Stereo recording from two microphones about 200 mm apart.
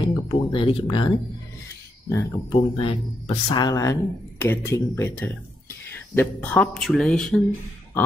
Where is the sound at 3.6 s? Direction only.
20° left (ahead or behind).